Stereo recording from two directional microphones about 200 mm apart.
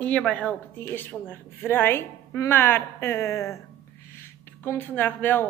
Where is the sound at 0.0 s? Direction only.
5° left (ahead or behind).